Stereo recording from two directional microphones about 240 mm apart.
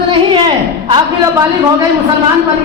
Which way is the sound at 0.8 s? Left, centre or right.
Centre.